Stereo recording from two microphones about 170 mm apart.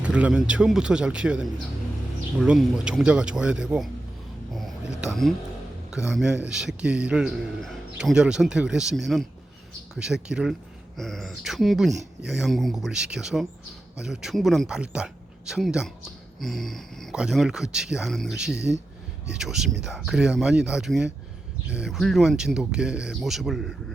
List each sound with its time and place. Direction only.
0.0 s speech: 5° right (ahead or behind)
4.9 s speech: centre (ahead or behind)
18.5 s speech: 85° right
19.3 s speech: 5° right (ahead or behind)